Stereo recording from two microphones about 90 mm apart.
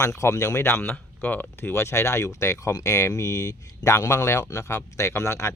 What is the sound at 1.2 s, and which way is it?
Speech, 20° left (ahead or behind).